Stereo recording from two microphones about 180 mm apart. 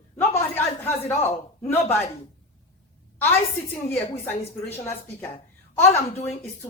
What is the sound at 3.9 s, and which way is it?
A woman's voice, 10° left (ahead or behind).